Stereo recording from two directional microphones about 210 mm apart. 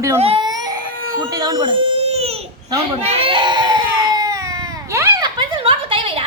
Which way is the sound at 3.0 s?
25° right (ahead or behind).